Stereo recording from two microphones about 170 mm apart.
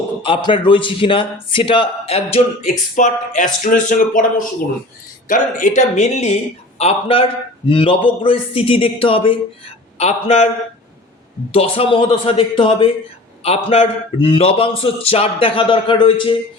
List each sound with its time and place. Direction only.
0.2 s a man's voice: 30° left (ahead or behind)
11.5 s a man's voice: 35° left (ahead or behind)